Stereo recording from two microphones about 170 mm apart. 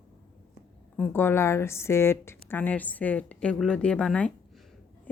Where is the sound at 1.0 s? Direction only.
10° left (ahead or behind).